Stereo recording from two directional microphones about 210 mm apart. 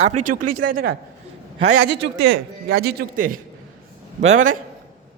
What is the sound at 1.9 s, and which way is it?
A woman's voice, 55° right (ahead or behind).